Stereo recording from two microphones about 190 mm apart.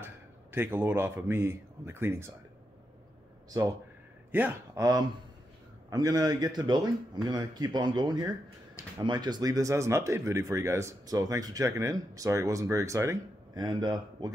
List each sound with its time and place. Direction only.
0.0 s a man's voice: 10° right (ahead or behind)
3.4 s a man's voice: 15° right (ahead or behind)